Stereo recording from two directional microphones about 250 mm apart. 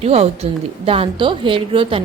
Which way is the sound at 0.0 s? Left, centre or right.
Right.